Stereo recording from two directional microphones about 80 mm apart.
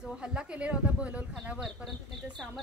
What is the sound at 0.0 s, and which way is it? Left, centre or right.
Speech, centre.